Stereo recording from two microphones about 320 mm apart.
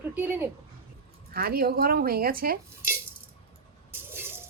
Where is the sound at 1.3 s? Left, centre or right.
Right.